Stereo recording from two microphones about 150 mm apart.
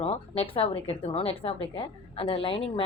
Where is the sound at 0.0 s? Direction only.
40° left (ahead or behind).